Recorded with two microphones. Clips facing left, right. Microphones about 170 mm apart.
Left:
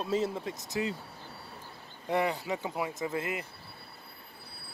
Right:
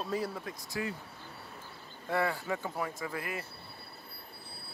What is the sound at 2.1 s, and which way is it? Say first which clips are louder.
Speech: left 2 dB; 20° left (ahead or behind).